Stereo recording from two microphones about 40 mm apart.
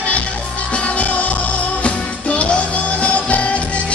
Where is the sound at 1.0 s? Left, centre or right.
Left.